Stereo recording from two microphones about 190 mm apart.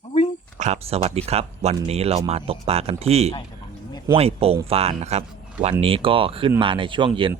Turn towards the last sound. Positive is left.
turn(degrees=-25)  # may be behind; listen again after turning